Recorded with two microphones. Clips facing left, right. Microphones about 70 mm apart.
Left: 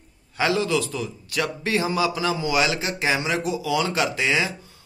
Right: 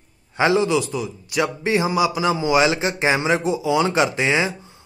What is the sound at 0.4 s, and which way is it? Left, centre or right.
A man's voice, right.